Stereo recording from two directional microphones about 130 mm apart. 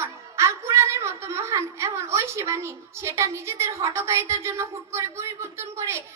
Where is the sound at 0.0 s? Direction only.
20° right (ahead or behind).